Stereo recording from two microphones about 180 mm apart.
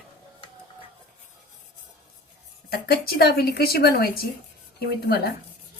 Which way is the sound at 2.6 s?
55° left (ahead or behind).